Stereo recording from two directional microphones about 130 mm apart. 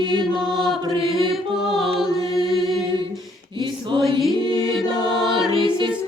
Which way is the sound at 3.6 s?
40° right (ahead or behind).